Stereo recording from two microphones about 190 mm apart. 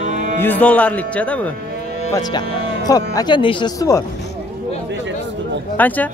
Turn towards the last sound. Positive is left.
turn(degrees=10)  # may be behind; listen again after turning